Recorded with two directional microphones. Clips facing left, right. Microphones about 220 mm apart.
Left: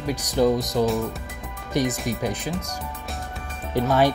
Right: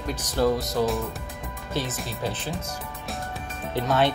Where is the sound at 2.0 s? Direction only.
15° left (ahead or behind).